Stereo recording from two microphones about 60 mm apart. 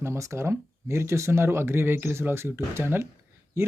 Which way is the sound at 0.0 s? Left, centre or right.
Right.